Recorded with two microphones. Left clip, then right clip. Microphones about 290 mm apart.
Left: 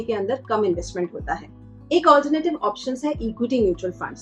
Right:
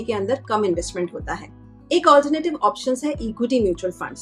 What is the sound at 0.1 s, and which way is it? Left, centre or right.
Speech, right.